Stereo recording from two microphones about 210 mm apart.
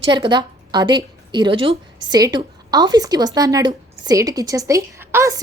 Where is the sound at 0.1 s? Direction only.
20° right (ahead or behind).